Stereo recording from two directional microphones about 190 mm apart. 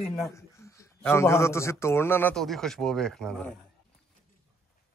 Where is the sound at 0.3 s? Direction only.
15° left (ahead or behind).